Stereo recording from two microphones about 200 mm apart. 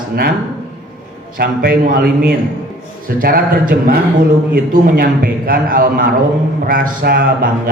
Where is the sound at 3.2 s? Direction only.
45° right (ahead or behind).